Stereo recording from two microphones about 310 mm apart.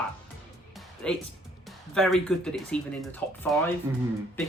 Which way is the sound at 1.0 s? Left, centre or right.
Centre.